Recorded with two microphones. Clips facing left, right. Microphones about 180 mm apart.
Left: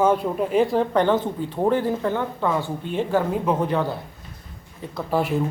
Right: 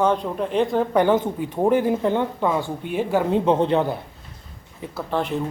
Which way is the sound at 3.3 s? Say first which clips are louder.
Right 4 dB; 25° right (ahead or behind).